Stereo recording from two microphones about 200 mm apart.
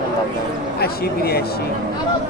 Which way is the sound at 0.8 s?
50° left (ahead or behind).